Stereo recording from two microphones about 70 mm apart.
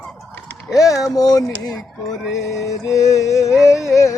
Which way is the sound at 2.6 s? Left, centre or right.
Left.